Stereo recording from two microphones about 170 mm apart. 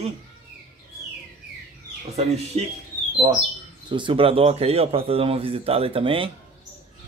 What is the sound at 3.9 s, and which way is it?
A man's voice, 30° right (ahead or behind).